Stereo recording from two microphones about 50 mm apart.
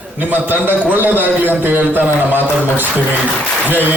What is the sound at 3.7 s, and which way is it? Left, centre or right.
Speech, right.